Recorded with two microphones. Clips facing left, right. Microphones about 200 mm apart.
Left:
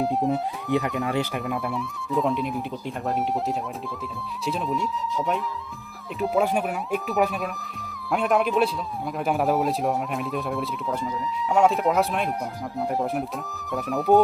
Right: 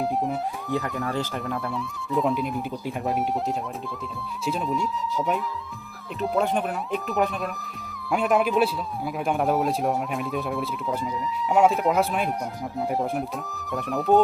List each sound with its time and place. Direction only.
0.0 s a man's voice: centre (ahead or behind)
0.7 s speech: 20° left (ahead or behind)
1.4 s a man's voice: centre (ahead or behind)